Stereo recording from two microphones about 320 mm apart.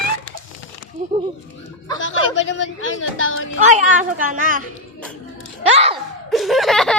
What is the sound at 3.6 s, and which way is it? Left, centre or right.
Speech, right.